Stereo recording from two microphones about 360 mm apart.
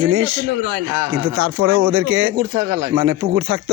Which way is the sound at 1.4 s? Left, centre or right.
Right.